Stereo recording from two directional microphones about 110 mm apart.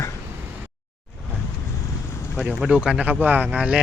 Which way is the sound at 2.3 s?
5° right (ahead or behind).